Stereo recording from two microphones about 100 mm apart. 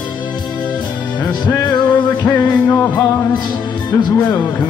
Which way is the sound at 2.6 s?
15° left (ahead or behind).